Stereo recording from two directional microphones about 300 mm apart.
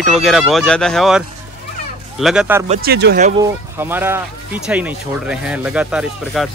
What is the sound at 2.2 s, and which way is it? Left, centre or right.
Speech, centre.